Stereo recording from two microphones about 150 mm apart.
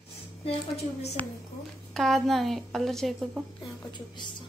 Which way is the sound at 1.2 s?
10° left (ahead or behind).